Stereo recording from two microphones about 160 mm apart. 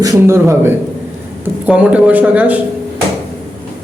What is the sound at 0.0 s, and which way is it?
A man's voice, 15° right (ahead or behind).